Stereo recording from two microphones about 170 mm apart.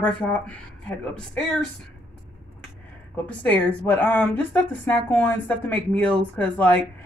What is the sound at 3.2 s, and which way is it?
A woman's voice, 10° left (ahead or behind).